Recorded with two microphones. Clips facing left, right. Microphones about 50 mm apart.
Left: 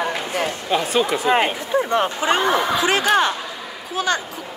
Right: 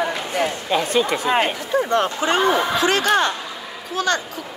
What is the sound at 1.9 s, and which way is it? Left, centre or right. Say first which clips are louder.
Speech: even; centre.